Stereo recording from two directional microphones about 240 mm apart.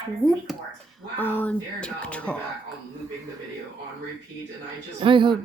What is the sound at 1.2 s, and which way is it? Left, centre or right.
A woman's voice, centre.